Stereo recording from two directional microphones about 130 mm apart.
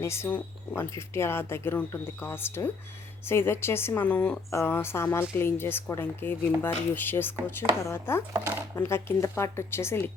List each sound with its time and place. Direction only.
0.0 s speech: 20° left (ahead or behind)
8.3 s speech: 20° right (ahead or behind)
8.7 s speech: 20° left (ahead or behind)